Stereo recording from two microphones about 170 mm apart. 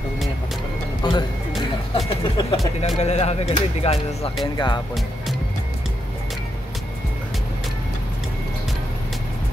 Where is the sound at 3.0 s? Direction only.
40° left (ahead or behind).